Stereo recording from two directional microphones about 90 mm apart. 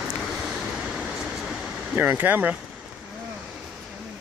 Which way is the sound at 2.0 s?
20° right (ahead or behind).